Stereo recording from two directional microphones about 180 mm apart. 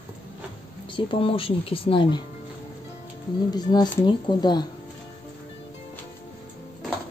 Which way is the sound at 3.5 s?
20° left (ahead or behind).